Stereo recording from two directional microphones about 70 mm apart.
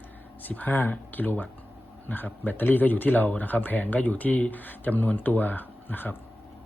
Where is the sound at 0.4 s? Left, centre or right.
Left.